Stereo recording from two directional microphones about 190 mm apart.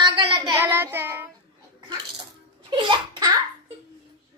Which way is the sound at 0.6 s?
10° right (ahead or behind).